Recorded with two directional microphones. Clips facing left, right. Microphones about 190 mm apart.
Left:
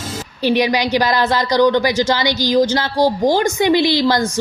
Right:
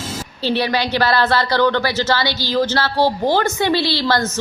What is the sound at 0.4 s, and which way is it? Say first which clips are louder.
A woman's voice: left 3 dB; 15° left (ahead or behind).